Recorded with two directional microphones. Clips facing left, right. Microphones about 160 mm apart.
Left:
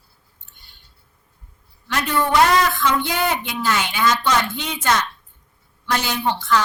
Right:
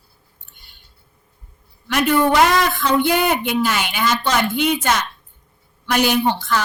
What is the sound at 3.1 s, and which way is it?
Speech, 60° right (ahead or behind).